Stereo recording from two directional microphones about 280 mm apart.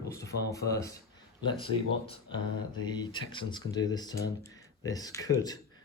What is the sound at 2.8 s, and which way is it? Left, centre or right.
Speech, centre.